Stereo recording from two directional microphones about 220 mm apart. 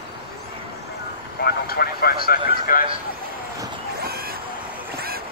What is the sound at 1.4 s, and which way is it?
Speech, 45° left (ahead or behind).